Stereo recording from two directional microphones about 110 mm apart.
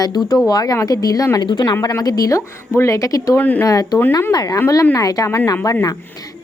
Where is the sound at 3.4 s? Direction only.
15° left (ahead or behind).